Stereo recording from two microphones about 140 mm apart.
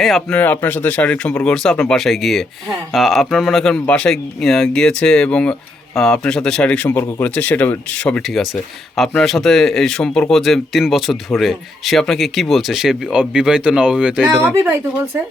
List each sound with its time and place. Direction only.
0.0 s speech: centre (ahead or behind)
0.3 s speech: 15° left (ahead or behind); by 14.7 s 10° right (ahead or behind)